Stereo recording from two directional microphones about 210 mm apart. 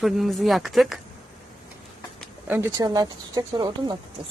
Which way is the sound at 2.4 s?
15° right (ahead or behind).